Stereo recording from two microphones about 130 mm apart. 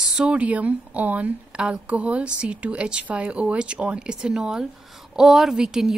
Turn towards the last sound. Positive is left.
turn(degrees=-5)  # may be behind; listen again after turning